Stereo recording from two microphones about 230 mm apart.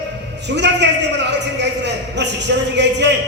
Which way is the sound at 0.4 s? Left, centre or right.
Right.